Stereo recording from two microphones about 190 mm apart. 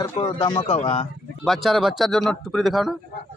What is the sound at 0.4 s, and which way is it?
Speech, 25° left (ahead or behind).